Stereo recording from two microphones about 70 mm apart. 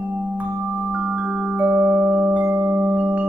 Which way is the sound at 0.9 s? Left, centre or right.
Centre.